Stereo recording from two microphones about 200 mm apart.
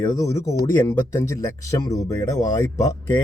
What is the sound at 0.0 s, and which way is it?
Speech, 15° left (ahead or behind).